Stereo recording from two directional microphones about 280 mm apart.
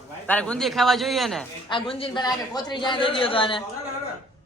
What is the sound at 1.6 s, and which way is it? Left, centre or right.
A man's voice, centre.